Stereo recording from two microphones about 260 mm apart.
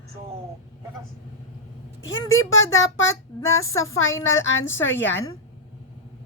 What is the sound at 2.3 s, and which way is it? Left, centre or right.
A woman's voice, left.